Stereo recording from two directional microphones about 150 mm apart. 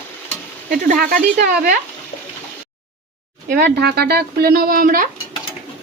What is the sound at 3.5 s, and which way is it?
Speech, 90° right.